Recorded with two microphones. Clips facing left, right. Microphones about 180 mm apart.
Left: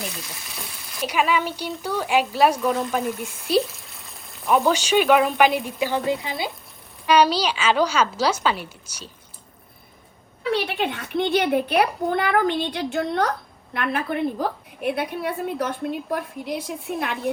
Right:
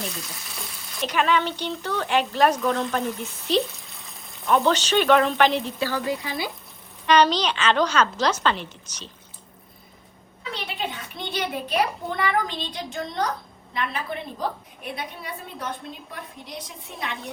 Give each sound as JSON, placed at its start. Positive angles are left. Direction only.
{"t": 0.5, "sound": "speech", "side_deg": 5}
{"t": 7.0, "sound": "speech", "side_deg": 10}
{"t": 10.5, "sound": "a woman's voice", "side_deg": 65}